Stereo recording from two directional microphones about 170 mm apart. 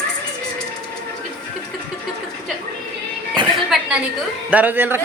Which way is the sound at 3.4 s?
25° right (ahead or behind).